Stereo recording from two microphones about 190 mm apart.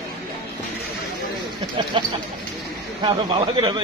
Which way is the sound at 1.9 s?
25° right (ahead or behind).